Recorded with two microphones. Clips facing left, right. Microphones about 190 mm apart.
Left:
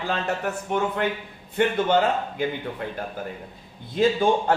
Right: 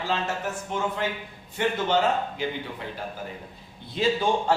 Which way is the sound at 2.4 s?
55° left (ahead or behind).